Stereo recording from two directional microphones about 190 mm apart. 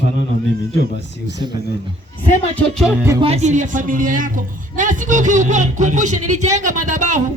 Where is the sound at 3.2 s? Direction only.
35° right (ahead or behind).